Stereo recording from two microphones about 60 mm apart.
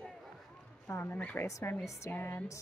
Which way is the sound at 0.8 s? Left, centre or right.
Left.